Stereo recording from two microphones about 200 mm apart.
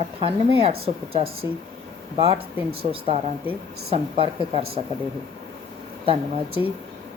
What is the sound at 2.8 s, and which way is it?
A woman's voice, 25° right (ahead or behind).